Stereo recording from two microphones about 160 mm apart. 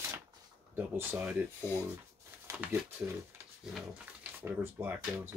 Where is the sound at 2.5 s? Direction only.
15° right (ahead or behind).